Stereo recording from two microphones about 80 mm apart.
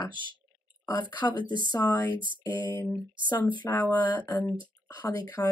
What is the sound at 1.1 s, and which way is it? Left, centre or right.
Speech, left.